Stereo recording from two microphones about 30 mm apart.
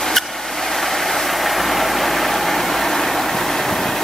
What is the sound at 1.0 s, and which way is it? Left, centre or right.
Vehicle, centre.